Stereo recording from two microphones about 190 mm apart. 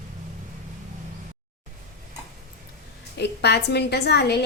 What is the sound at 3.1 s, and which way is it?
A woman's voice, 60° left (ahead or behind).